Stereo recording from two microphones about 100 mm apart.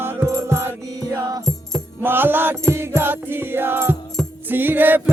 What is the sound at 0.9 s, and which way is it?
Music, 35° right (ahead or behind).